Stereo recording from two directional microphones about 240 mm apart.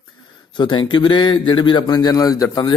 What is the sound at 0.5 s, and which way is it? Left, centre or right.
Speech, centre.